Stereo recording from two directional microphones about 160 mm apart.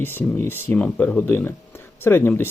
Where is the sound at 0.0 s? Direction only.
15° left (ahead or behind).